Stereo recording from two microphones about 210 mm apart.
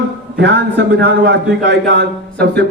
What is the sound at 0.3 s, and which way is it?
A man's voice, 55° right (ahead or behind).